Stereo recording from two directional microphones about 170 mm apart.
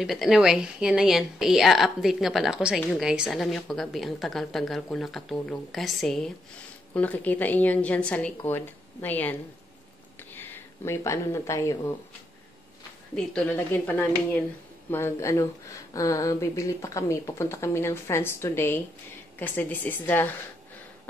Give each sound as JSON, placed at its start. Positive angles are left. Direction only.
{"t": 0.0, "sound": "a woman's voice", "side_deg": 0}
{"t": 13.1, "sound": "speech", "side_deg": 5}